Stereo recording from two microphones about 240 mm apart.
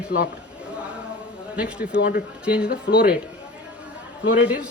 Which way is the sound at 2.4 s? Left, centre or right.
Centre.